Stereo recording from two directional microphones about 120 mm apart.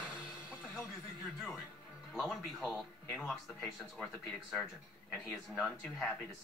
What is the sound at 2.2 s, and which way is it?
Speech, centre (ahead or behind).